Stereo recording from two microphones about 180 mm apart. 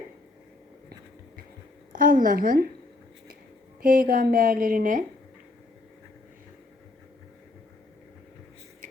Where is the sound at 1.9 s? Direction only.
50° right (ahead or behind).